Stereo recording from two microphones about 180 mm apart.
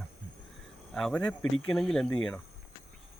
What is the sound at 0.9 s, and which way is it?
Speech, 5° left (ahead or behind).